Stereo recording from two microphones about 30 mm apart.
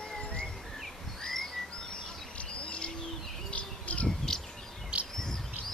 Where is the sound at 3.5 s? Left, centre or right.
Left.